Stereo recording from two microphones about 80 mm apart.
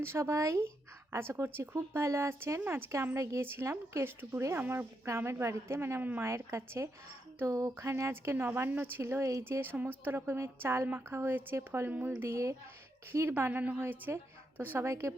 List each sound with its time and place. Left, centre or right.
0.0 s a woman's voice: right
9.4 s a woman's voice: right
11.9 s a woman's voice: right